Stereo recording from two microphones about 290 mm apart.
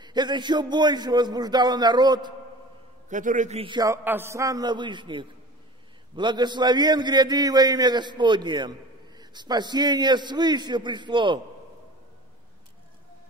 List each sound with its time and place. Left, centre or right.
0.0 s a man's voice: centre
3.1 s a man's voice: right